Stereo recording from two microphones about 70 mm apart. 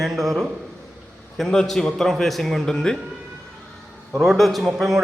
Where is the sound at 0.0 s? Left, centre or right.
Centre.